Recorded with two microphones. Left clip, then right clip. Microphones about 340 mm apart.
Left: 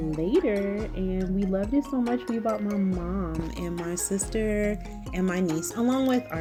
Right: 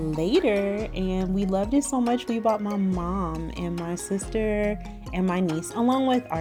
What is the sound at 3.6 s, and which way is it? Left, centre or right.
Speech, right.